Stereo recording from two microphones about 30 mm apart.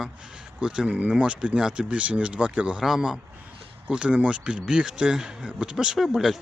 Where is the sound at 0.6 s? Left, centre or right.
Right.